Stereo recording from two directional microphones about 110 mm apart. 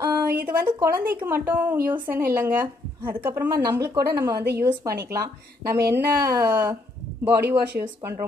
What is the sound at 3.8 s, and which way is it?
A woman's voice, 30° right (ahead or behind).